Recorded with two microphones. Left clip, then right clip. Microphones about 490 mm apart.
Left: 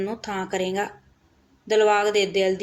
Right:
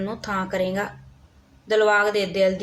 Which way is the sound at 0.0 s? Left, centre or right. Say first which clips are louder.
Right 1 dB; right.